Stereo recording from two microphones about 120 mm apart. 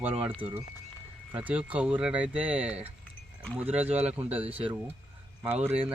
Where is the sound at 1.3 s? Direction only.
10° right (ahead or behind).